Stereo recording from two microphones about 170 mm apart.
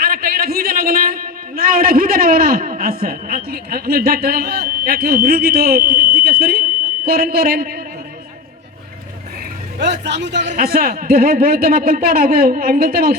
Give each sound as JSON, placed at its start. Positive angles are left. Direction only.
{"t": 0.0, "sound": "a man's voice", "side_deg": -60}
{"t": 9.8, "sound": "a man's voice", "side_deg": -90}
{"t": 10.4, "sound": "a man's voice", "side_deg": -45}
{"t": 10.7, "sound": "a man's voice", "side_deg": -60}